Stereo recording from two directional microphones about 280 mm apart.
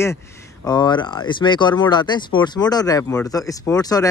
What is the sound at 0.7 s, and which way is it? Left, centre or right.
Speech, centre.